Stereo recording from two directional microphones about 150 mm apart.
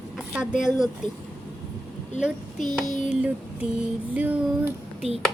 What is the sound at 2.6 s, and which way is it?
Child singing, 60° left (ahead or behind).